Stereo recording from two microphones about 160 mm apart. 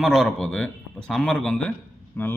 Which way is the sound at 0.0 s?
Centre (ahead or behind).